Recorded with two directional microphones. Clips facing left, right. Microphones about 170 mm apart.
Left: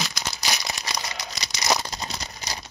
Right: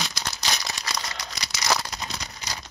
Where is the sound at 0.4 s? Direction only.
15° left (ahead or behind).